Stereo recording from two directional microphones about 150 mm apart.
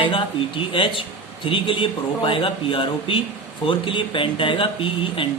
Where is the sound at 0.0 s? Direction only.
35° left (ahead or behind).